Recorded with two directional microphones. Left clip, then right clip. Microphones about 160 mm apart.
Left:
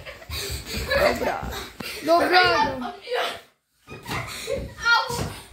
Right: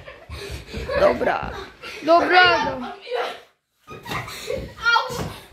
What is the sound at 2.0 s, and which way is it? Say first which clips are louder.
Speech: right 3 dB; 5° left (ahead or behind).